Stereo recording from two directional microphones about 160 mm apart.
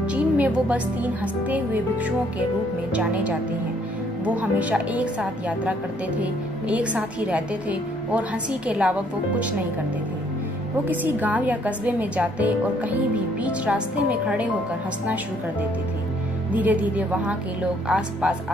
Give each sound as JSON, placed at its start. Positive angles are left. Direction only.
{"t": 0.0, "sound": "a woman's voice", "side_deg": -10}
{"t": 4.4, "sound": "speech", "side_deg": -10}
{"t": 10.9, "sound": "speech", "side_deg": -10}
{"t": 16.5, "sound": "speech", "side_deg": -10}